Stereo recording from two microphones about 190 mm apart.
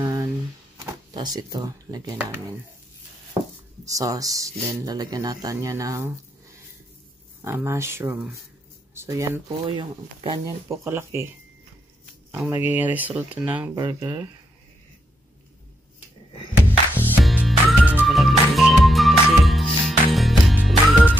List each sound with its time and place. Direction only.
0.0 s a sound: 20° right (ahead or behind)
1.1 s speech: 20° right (ahead or behind)
3.8 s speech: 15° right (ahead or behind)
7.4 s speech: 15° right (ahead or behind)
10.4 s speech: 15° right (ahead or behind)
12.3 s speech: 10° right (ahead or behind)
13.7 s speech: 20° right (ahead or behind)
16.9 s music: 5° right (ahead or behind)